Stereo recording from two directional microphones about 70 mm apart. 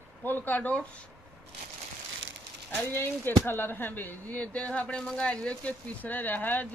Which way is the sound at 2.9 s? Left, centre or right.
Left.